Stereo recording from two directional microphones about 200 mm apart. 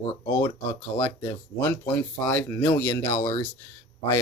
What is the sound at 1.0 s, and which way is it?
Speech, 10° left (ahead or behind).